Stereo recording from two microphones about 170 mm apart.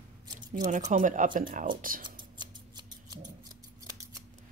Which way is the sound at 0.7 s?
45° right (ahead or behind).